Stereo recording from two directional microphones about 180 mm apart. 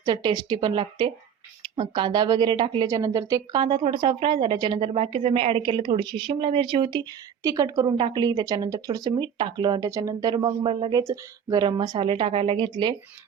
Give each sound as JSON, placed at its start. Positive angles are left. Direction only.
{"t": 0.0, "sound": "a woman's voice", "side_deg": -25}